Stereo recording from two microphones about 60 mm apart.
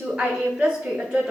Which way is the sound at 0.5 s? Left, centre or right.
Right.